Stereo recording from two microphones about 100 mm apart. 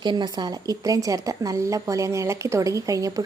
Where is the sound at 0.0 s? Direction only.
50° right (ahead or behind).